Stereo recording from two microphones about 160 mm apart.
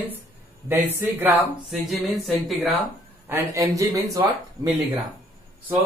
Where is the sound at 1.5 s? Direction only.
Centre (ahead or behind).